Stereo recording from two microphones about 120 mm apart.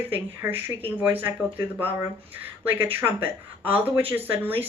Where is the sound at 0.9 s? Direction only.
15° right (ahead or behind).